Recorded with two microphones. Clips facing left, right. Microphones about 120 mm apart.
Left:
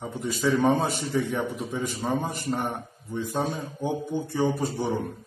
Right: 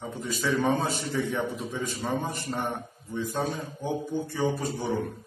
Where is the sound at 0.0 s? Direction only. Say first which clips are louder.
Left 4 dB; 20° left (ahead or behind).